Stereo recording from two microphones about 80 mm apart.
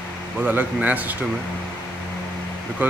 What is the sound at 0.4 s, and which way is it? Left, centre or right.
Speech, centre.